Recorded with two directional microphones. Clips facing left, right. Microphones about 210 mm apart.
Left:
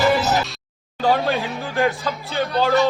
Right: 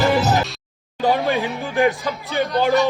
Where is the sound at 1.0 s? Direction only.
15° right (ahead or behind).